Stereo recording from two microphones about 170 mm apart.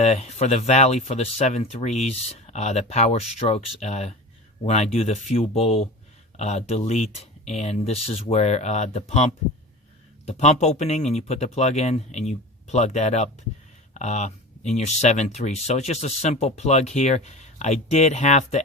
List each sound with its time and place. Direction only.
0.0 s speech: 40° left (ahead or behind)